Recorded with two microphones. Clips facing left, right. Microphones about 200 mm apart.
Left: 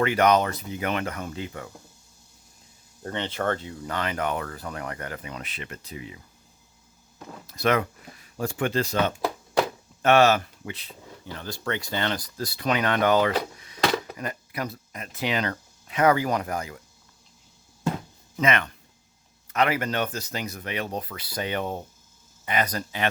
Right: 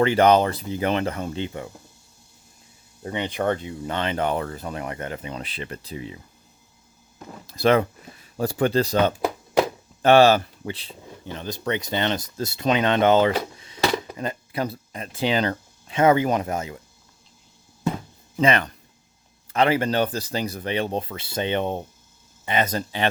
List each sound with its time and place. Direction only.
0.0 s speech: 30° right (ahead or behind)
3.0 s speech: 10° right (ahead or behind); by 6.1 s 30° right (ahead or behind)
7.4 s speech: 30° right (ahead or behind)
13.6 s a sound: 25° right (ahead or behind)
14.2 s speech: 25° right (ahead or behind)
18.3 s speech: 35° right (ahead or behind)